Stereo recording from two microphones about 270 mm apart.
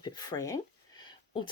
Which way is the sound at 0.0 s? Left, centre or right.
Centre.